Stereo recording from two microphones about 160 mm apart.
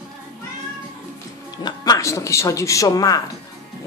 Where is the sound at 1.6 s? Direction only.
25° left (ahead or behind).